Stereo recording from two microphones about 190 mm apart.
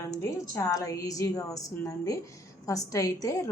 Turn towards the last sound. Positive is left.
turn(degrees=15)  # may be behind; listen again after turning